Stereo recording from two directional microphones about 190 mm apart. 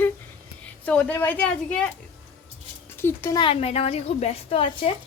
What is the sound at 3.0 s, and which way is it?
Speech, 15° left (ahead or behind).